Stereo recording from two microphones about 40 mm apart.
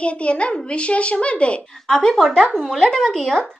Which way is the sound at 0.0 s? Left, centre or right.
Left.